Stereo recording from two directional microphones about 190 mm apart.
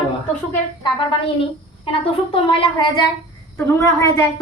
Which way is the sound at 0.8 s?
25° left (ahead or behind).